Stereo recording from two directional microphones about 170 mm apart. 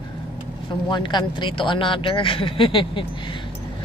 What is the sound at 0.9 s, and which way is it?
Speech, 25° left (ahead or behind).